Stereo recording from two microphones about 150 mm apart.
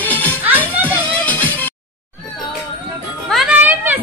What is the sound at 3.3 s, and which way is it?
Music, centre (ahead or behind).